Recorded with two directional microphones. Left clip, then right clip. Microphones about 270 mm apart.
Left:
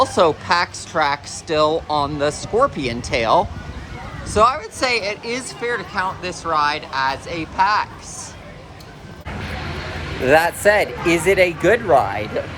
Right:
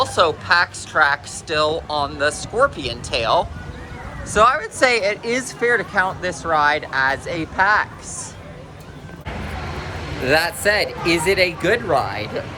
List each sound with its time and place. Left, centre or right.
0.0 s speech: left; by 7.9 s centre
10.2 s speech: centre